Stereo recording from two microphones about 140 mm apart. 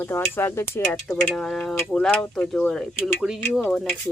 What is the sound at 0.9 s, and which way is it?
Speech, 5° left (ahead or behind).